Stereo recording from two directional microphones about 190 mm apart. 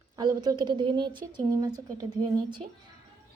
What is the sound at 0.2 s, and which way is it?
A woman's voice, 20° right (ahead or behind).